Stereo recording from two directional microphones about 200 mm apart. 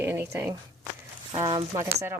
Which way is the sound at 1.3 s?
25° right (ahead or behind).